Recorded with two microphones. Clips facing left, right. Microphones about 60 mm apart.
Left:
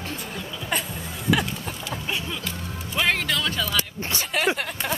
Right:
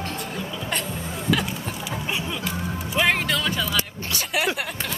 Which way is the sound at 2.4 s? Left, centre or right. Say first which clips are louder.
Right 4 dB; centre.